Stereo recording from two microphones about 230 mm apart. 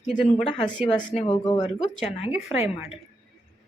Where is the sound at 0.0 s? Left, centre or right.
Left.